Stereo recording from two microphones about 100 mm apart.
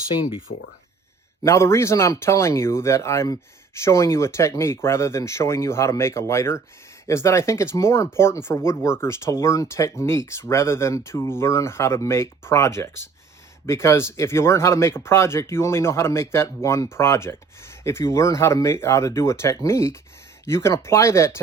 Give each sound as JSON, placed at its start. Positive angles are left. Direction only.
{"t": 0.2, "sound": "speech", "side_deg": 60}
{"t": 1.5, "sound": "speech", "side_deg": 30}